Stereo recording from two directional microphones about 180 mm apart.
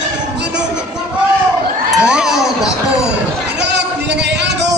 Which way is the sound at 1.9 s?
5° right (ahead or behind).